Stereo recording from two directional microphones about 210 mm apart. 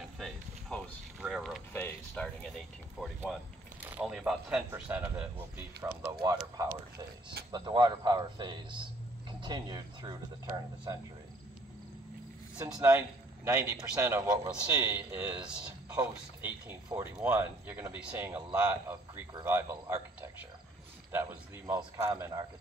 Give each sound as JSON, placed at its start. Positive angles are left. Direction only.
{"t": 0.2, "sound": "a sound", "side_deg": 0}
{"t": 3.8, "sound": "a man's voice", "side_deg": -5}
{"t": 5.8, "sound": "speech", "side_deg": -20}
{"t": 7.5, "sound": "speech", "side_deg": -20}
{"t": 12.6, "sound": "a man's voice", "side_deg": -10}
{"t": 21.1, "sound": "cricket", "side_deg": -10}